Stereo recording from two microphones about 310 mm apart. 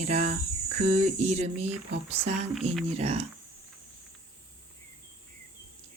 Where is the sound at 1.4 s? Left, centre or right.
Right.